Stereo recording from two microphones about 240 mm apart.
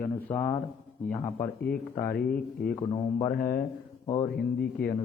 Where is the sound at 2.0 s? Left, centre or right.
Left.